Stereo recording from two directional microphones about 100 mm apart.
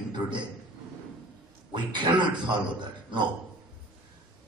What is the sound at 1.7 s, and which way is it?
A man's voice, 50° right (ahead or behind).